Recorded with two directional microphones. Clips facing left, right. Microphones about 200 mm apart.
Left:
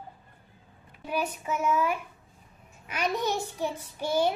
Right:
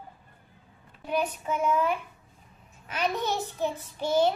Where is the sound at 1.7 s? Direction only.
10° left (ahead or behind).